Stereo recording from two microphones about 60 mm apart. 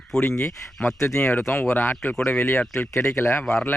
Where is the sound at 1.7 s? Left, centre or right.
Left.